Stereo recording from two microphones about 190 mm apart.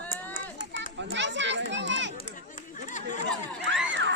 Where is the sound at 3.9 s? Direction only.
75° right (ahead or behind).